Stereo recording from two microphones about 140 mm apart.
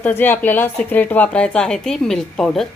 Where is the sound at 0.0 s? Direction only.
15° left (ahead or behind).